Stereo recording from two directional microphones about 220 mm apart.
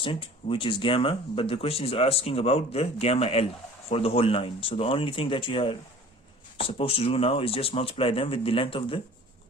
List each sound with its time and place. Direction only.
0.0 s speech: 25° left (ahead or behind)